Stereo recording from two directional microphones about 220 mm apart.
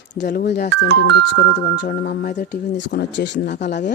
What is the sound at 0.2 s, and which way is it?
Speech, 45° left (ahead or behind).